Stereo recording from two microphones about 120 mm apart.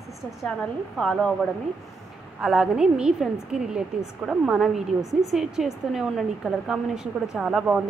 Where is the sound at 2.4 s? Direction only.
5° right (ahead or behind).